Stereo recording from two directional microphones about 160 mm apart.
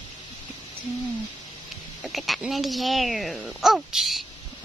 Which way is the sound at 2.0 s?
Centre (ahead or behind).